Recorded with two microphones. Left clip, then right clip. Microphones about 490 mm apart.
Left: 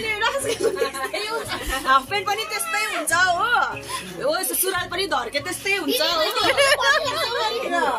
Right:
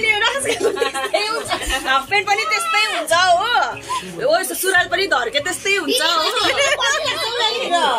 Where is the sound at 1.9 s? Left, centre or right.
Left.